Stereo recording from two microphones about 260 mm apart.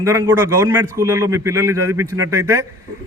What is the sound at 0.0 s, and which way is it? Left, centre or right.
A man's voice, centre.